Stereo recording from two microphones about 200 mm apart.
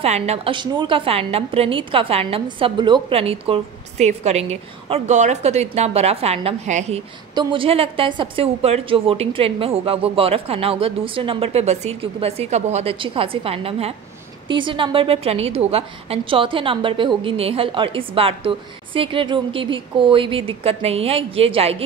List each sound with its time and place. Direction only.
0.0 s a woman's voice: 30° right (ahead or behind)